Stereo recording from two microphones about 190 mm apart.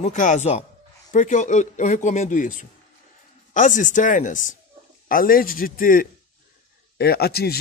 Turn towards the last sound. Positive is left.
turn(degrees=55)  # may be behind; listen again after turning